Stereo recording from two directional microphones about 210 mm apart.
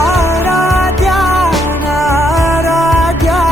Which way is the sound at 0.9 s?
Centre (ahead or behind).